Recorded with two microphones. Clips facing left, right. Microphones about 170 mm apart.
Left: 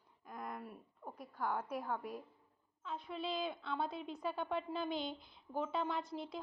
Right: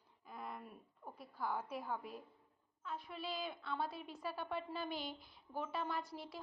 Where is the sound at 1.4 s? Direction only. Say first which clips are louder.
Left 2 dB; 10° right (ahead or behind).